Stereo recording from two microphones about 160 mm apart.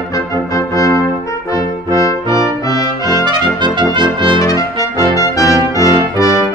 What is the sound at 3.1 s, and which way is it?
Trumpet, 30° right (ahead or behind).